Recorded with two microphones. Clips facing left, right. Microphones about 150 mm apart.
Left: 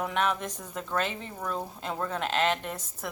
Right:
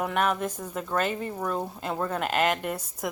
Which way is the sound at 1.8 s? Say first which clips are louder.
Right 2 dB; 5° right (ahead or behind).